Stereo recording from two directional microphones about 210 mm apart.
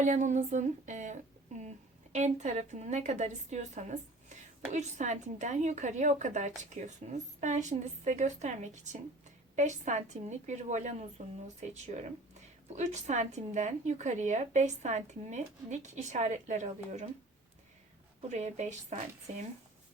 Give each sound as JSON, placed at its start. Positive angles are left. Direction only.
{"t": 0.0, "sound": "speech", "side_deg": -35}
{"t": 18.3, "sound": "speech", "side_deg": -35}